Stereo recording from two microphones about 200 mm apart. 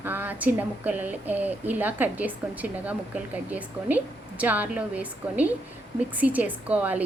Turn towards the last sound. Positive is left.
turn(degrees=-5)  # may be behind; listen again after turning